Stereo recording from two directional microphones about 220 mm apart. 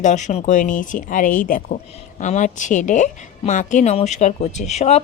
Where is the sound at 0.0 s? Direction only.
35° left (ahead or behind).